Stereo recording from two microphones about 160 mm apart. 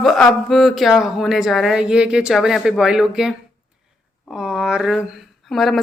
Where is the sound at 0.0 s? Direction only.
Centre (ahead or behind).